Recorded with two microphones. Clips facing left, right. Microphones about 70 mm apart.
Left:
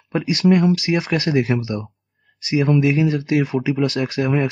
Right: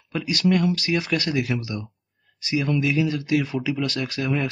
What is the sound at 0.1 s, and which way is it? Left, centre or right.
Speech, left.